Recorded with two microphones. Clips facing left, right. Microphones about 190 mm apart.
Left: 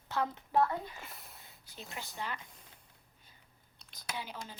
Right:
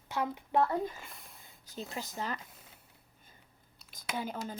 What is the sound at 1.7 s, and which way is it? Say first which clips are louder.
Speech: right 6 dB; 35° right (ahead or behind).